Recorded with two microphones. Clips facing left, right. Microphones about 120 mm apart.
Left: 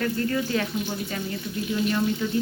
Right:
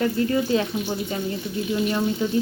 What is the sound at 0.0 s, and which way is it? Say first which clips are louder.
Speech: right 4 dB; 20° right (ahead or behind).